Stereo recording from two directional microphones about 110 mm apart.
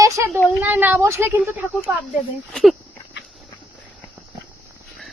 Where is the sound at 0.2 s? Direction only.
25° right (ahead or behind).